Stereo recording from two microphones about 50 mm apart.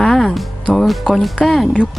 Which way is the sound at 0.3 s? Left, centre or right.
Centre.